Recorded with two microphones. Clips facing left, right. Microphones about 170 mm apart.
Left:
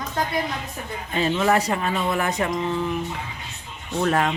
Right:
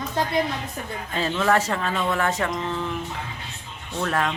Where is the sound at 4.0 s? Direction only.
25° left (ahead or behind).